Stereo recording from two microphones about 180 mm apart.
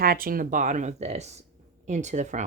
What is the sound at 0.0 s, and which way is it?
Speech, 55° right (ahead or behind).